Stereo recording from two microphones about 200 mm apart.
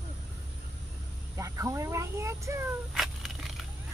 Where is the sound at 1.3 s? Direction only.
15° right (ahead or behind).